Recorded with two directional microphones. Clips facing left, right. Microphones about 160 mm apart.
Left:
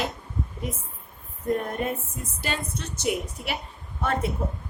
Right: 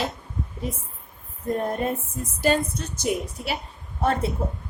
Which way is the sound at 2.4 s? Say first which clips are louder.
Right 9 dB; 40° right (ahead or behind).